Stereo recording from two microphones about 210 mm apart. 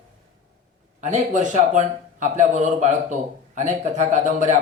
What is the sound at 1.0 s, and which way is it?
Speech, 35° right (ahead or behind).